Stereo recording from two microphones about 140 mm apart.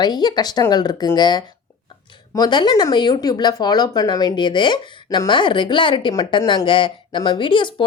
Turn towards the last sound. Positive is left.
turn(degrees=35)  # may be behind; listen again after turning